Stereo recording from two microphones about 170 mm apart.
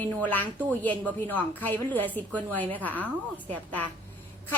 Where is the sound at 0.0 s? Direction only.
10° left (ahead or behind).